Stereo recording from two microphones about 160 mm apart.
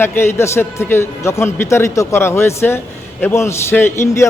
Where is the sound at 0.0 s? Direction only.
15° left (ahead or behind).